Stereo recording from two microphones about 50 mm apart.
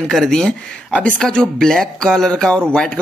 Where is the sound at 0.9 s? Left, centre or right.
Left.